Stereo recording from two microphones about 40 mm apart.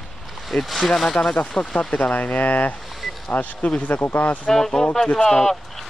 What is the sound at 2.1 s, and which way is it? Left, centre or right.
Speech, left.